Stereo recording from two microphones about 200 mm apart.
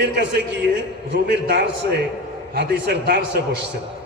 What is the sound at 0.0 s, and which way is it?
A man's voice, 60° right (ahead or behind).